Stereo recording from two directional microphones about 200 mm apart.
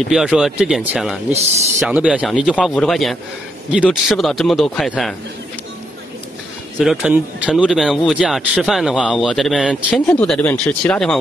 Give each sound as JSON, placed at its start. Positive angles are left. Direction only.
{"t": 0.1, "sound": "speech", "side_deg": -5}
{"t": 6.8, "sound": "speech", "side_deg": -5}